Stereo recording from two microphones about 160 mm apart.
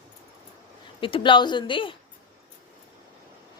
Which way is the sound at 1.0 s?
35° left (ahead or behind).